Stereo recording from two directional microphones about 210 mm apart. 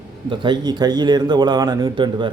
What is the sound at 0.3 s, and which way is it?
A man's voice, 20° right (ahead or behind).